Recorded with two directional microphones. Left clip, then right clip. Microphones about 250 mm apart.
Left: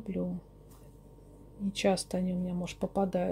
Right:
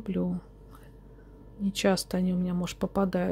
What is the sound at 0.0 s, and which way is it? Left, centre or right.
Speech, centre.